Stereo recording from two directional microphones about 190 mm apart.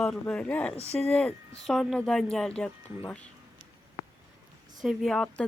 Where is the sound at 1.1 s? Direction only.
5° left (ahead or behind).